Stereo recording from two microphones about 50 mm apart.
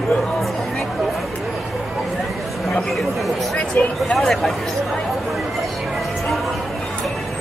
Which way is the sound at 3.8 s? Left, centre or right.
Left.